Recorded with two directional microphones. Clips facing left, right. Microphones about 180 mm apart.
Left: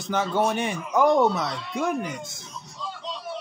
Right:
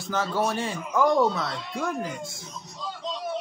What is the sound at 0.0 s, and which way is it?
Speech, 20° left (ahead or behind).